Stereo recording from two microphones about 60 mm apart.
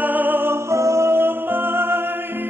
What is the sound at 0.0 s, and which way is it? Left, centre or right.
Music, right.